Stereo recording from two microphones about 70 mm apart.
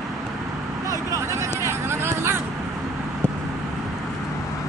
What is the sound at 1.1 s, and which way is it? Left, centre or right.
Vehicle, right.